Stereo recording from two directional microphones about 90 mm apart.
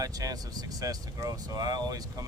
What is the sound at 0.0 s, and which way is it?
Speech, 40° right (ahead or behind).